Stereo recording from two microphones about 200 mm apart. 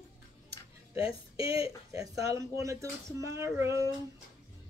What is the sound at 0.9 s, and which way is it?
Speech, 30° left (ahead or behind).